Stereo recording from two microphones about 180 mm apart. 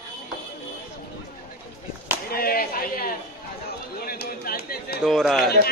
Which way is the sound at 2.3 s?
55° left (ahead or behind).